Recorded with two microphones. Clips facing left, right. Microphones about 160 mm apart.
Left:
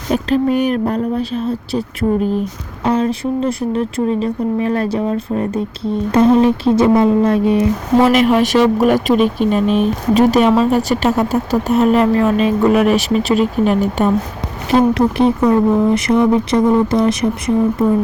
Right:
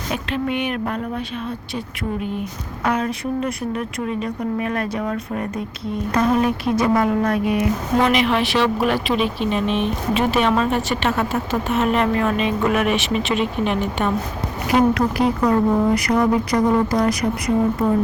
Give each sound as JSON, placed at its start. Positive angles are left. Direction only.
{"t": 0.1, "sound": "speech", "side_deg": 40}
{"t": 8.1, "sound": "speech", "side_deg": 45}
{"t": 14.7, "sound": "speech", "side_deg": 25}